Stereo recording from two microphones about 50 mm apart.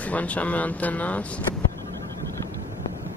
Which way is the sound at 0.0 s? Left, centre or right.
Left.